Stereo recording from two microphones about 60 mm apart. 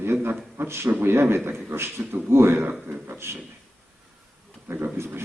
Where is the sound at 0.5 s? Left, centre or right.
Right.